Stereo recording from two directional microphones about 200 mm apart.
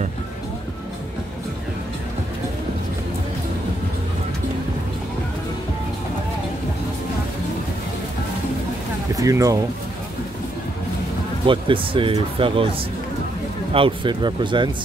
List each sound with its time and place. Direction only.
9.1 s speech: 15° right (ahead or behind)
11.4 s speech: 25° right (ahead or behind)
13.7 s speech: 25° right (ahead or behind)